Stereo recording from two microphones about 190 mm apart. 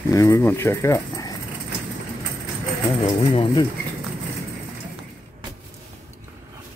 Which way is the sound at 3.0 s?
25° left (ahead or behind).